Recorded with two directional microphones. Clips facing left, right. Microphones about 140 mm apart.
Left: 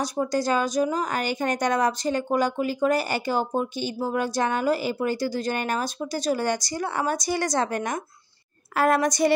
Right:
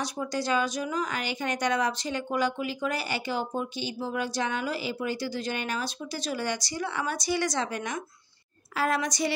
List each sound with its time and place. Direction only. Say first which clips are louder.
0.0 s a woman's voice: left 6 dB; 40° left (ahead or behind)